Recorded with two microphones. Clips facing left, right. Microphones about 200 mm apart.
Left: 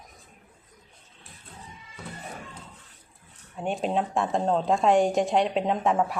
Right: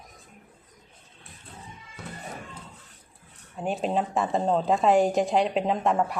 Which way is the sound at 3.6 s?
Centre (ahead or behind).